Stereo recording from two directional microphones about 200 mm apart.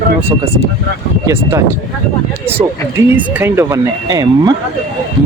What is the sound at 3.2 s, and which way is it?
Speech, 10° right (ahead or behind).